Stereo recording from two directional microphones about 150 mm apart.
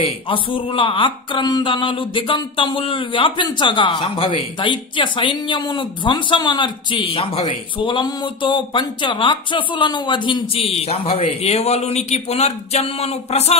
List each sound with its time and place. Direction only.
0.3 s speech: 35° left (ahead or behind)